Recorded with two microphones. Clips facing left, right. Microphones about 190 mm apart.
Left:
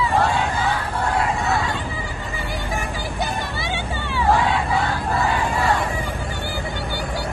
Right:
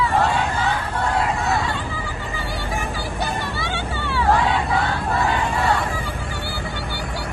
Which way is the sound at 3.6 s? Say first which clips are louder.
Even; 15° left (ahead or behind).